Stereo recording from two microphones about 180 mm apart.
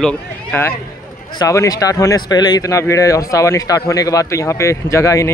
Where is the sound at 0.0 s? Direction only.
10° left (ahead or behind).